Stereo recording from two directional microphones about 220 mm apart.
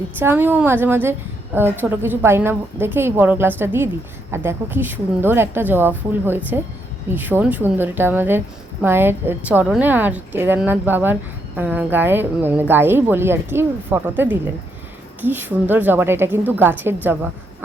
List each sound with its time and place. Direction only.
0.2 s a woman's voice: 10° right (ahead or behind)